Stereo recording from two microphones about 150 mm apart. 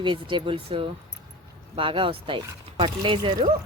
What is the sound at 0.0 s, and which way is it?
Speech, 35° right (ahead or behind).